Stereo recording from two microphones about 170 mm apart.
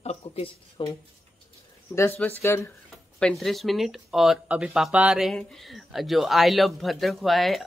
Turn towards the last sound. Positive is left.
turn(degrees=0)  # may be behind; listen again after turning